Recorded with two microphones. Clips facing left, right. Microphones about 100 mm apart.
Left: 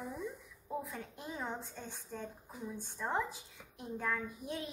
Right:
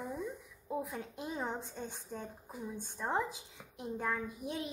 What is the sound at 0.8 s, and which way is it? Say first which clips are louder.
A woman's voice: right 4 dB; 20° right (ahead or behind).